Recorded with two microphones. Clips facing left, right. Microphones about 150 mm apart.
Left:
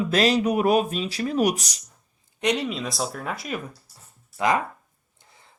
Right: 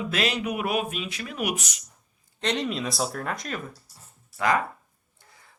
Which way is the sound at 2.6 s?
Centre (ahead or behind).